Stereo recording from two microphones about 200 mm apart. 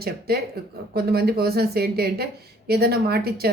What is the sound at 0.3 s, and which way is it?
Speech, 50° right (ahead or behind).